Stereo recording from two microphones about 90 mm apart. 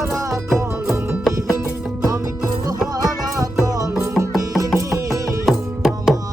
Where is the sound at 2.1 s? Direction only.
35° right (ahead or behind).